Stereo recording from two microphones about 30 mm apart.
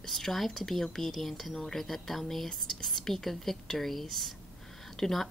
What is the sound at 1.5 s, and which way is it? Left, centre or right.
Speech, centre.